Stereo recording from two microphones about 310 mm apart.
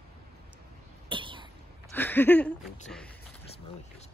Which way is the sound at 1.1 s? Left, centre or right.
Centre.